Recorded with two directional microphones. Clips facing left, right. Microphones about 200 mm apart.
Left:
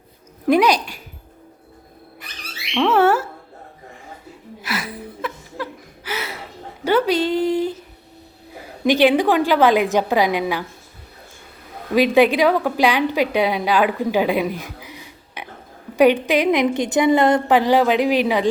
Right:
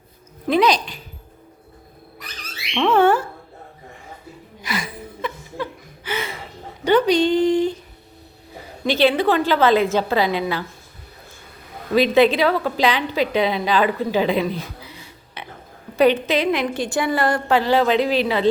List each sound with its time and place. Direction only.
0.4 s a woman's voice: 10° left (ahead or behind)
2.7 s a sound: 5° left (ahead or behind)
4.6 s music: 5° left (ahead or behind)
6.1 s a sound: 5° left (ahead or behind)
8.8 s a woman's voice: 15° left (ahead or behind)
11.9 s a woman's voice: 10° left (ahead or behind)